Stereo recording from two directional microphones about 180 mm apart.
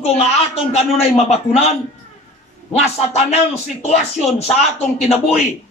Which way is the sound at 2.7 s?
35° left (ahead or behind).